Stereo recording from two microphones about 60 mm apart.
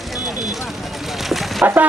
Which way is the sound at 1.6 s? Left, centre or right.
Right.